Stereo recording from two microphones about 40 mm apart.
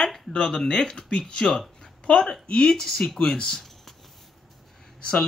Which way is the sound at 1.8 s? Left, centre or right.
Left.